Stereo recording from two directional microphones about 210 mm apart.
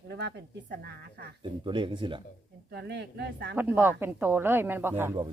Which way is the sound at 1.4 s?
25° right (ahead or behind).